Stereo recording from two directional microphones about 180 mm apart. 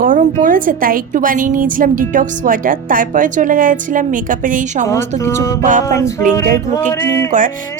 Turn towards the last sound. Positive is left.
turn(degrees=15)  # may be behind; listen again after turning